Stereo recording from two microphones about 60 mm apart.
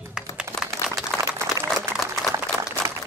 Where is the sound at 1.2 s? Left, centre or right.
Right.